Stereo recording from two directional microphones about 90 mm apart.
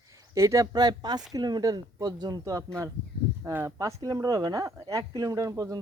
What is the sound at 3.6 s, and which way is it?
Speech, 40° right (ahead or behind).